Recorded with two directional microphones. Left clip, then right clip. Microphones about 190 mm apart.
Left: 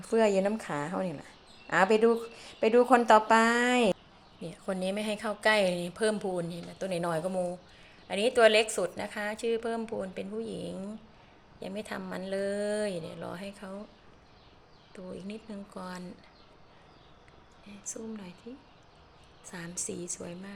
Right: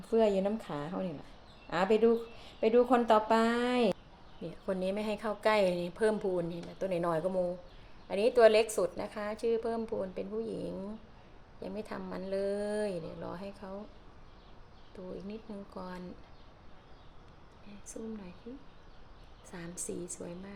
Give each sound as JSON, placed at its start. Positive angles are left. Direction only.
{"t": 0.1, "sound": "speech", "side_deg": 15}
{"t": 4.4, "sound": "a woman's voice", "side_deg": -5}
{"t": 14.9, "sound": "a woman's voice", "side_deg": 5}
{"t": 17.7, "sound": "a woman's voice", "side_deg": 5}
{"t": 19.5, "sound": "a woman's voice", "side_deg": 5}